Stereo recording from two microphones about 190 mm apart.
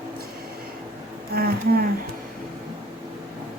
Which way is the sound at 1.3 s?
50° right (ahead or behind).